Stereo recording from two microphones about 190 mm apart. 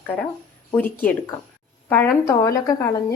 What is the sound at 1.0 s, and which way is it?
A woman's voice, 10° left (ahead or behind).